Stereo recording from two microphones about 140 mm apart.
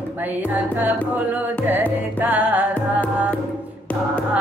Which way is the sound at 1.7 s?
15° right (ahead or behind).